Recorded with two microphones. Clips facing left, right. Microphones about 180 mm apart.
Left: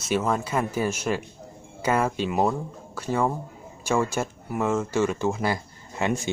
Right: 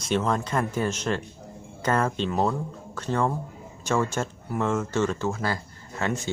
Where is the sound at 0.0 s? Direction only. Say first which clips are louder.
Even; 5° left (ahead or behind).